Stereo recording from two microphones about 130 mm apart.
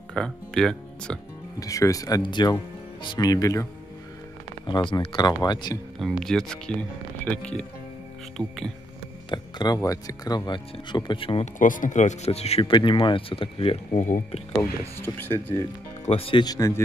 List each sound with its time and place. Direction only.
0.1 s speech: 5° left (ahead or behind)
1.6 s speech: 25° left (ahead or behind)
4.6 s speech: 35° left (ahead or behind)
5.9 s speech: centre (ahead or behind)
9.3 s speech: 30° left (ahead or behind)
11.5 s speech: 90° left; by 14.0 s 45° left (ahead or behind)
14.6 s speech: 15° left (ahead or behind)
16.1 s speech: 45° left (ahead or behind)
16.4 s speech: 25° left (ahead or behind)